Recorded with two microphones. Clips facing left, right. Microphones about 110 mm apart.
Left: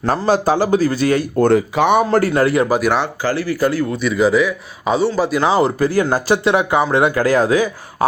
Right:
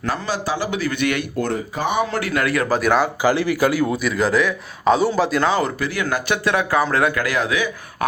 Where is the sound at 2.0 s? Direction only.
40° left (ahead or behind).